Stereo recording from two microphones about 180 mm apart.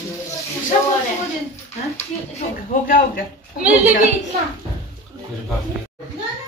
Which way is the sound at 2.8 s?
50° left (ahead or behind).